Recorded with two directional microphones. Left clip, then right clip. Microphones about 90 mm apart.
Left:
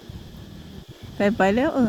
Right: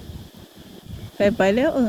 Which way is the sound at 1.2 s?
10° left (ahead or behind).